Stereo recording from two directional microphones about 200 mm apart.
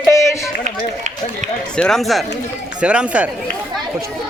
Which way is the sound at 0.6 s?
35° right (ahead or behind).